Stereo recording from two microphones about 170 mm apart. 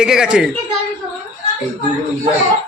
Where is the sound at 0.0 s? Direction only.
5° right (ahead or behind).